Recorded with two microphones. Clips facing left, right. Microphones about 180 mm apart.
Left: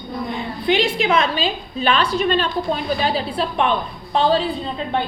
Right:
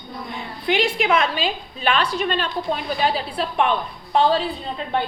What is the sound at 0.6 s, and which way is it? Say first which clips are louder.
A woman's voice: left 2 dB; 30° left (ahead or behind).